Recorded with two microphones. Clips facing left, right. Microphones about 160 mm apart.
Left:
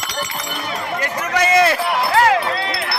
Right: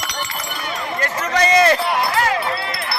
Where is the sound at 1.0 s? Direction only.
10° left (ahead or behind).